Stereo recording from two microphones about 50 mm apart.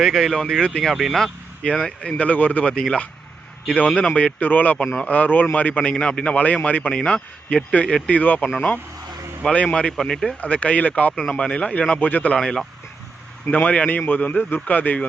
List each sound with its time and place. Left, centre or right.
0.0 s speech: centre
1.2 s a man's voice: centre; by 2.6 s left
2.6 s a man's voice: centre; by 8.4 s left
9.5 s a man's voice: left
10.0 s speech: centre
10.4 s a man's voice: left
11.9 s a man's voice: left
12.4 s speech: centre
13.5 s a man's voice: left